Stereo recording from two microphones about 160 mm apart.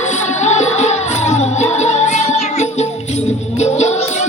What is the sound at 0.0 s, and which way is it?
Music, 45° left (ahead or behind).